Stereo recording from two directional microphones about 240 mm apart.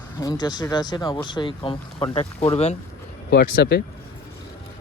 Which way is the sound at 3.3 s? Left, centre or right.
Left.